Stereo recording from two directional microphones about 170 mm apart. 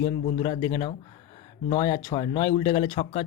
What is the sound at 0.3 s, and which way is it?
Speech, 30° left (ahead or behind).